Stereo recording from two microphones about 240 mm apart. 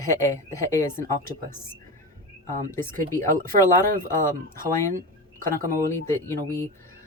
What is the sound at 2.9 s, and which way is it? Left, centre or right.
Speech, right.